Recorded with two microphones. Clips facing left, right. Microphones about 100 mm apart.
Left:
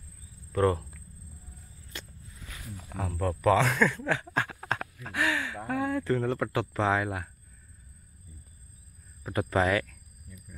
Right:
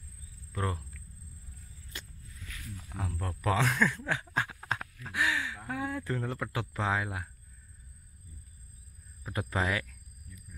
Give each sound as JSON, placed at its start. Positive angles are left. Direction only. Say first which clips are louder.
{"t": 0.5, "sound": "speech", "louder": "left 10 dB", "side_deg": -10}
{"t": 2.3, "sound": "snake", "louder": "left 2 dB", "side_deg": 20}
{"t": 3.3, "sound": "speech", "louder": "left 5 dB", "side_deg": -10}
{"t": 9.3, "sound": "speech", "louder": "left 6 dB", "side_deg": -10}